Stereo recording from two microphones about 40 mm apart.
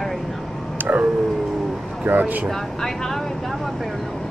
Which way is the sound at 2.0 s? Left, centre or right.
Right.